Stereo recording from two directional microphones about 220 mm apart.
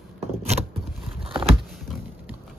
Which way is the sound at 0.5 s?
30° right (ahead or behind).